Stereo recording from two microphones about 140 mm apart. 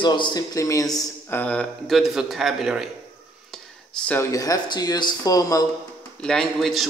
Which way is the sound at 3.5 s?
5° left (ahead or behind).